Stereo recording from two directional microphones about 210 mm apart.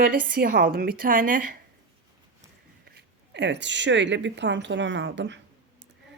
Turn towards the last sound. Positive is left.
turn(degrees=-55)  # may be behind; listen again after turning